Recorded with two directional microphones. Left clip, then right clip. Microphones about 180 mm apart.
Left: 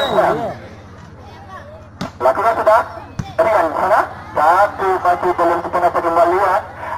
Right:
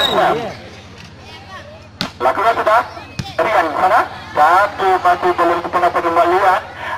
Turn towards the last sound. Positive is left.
turn(degrees=-30)  # may be behind; listen again after turning